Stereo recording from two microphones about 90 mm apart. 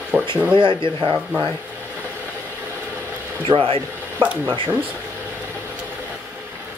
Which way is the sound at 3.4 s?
80° right.